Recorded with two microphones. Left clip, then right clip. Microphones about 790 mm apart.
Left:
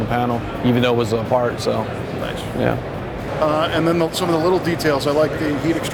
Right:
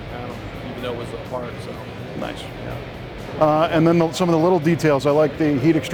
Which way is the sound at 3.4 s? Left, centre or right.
Right.